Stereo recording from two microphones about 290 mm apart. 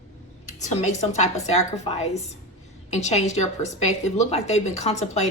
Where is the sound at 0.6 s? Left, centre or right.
Left.